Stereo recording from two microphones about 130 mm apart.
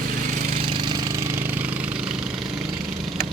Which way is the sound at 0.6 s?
40° right (ahead or behind).